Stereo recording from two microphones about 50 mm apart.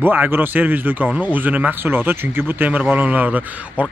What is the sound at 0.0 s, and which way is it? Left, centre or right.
Speech, right.